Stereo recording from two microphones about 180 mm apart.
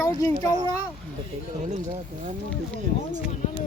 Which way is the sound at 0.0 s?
20° left (ahead or behind).